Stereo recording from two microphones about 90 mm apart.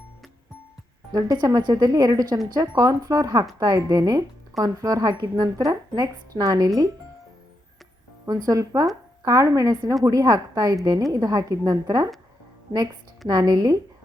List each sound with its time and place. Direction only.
1.1 s speech: 45° right (ahead or behind)
8.3 s a woman's voice: 40° right (ahead or behind)